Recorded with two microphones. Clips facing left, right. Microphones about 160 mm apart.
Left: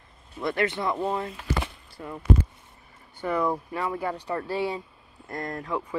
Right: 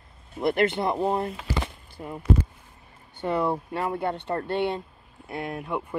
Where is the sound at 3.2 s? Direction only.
30° right (ahead or behind).